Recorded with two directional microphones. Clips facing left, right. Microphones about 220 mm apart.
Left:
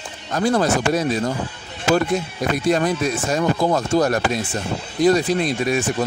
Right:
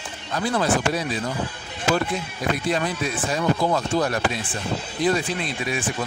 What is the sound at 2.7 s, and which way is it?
Speech, 45° left (ahead or behind).